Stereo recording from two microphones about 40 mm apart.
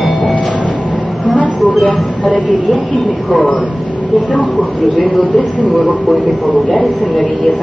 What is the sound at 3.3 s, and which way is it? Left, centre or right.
Speech, left.